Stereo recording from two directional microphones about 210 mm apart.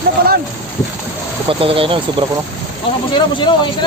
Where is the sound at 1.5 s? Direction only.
25° right (ahead or behind).